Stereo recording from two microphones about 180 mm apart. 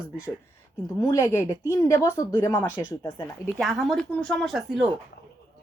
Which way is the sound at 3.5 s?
Centre (ahead or behind).